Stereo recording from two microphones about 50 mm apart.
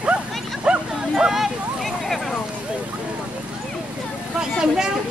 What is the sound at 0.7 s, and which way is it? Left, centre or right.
Bow-wow, centre.